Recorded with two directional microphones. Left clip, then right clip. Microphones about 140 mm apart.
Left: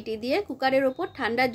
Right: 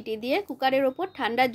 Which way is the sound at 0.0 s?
25° right (ahead or behind).